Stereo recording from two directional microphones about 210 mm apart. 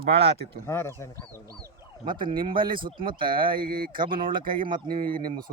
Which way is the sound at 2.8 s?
25° right (ahead or behind).